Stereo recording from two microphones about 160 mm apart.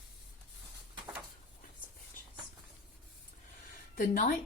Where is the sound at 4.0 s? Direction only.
60° left (ahead or behind).